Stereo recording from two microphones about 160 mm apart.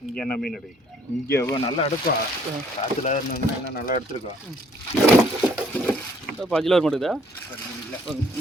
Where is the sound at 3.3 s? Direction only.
70° left (ahead or behind).